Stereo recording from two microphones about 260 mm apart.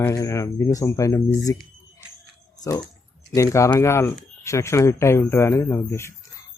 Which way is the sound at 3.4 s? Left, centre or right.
Centre.